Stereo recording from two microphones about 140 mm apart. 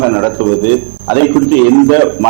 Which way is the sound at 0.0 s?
20° right (ahead or behind).